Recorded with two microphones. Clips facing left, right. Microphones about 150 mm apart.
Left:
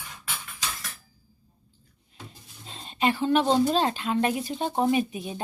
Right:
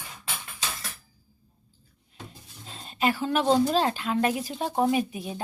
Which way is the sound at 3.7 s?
5° right (ahead or behind).